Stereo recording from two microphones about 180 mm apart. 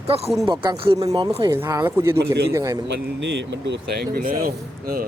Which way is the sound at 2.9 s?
75° right (ahead or behind).